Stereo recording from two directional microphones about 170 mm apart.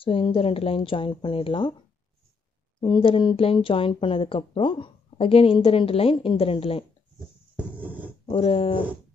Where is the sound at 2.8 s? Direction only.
30° left (ahead or behind).